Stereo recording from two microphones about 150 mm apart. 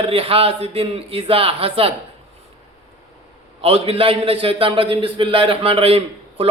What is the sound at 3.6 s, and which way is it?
A man's voice, 40° right (ahead or behind).